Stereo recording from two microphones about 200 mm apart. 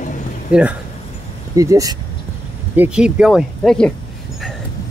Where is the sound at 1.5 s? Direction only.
15° right (ahead or behind); by 3.9 s 5° left (ahead or behind).